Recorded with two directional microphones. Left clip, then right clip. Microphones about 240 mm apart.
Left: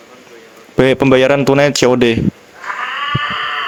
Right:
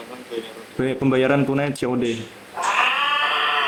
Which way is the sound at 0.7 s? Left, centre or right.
Left.